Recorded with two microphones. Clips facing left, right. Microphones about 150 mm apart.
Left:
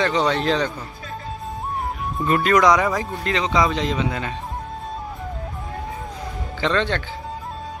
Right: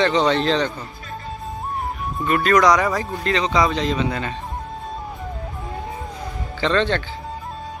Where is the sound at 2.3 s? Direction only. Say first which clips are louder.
Even; 20° left (ahead or behind).